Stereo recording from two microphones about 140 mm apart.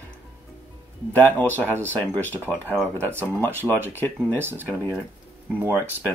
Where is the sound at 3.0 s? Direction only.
15° right (ahead or behind).